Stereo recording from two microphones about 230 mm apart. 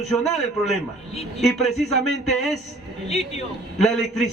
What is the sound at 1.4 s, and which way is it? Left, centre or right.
A man's voice, centre.